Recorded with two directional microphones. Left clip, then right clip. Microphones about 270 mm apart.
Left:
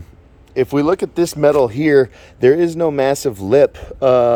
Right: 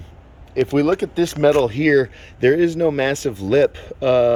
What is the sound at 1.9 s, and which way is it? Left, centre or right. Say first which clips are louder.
Speech: left 4 dB; centre.